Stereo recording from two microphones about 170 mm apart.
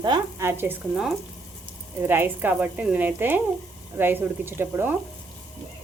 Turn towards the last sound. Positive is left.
turn(degrees=-15)  # may be behind; listen again after turning